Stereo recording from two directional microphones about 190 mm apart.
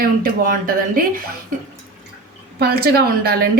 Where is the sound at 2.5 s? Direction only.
55° right (ahead or behind).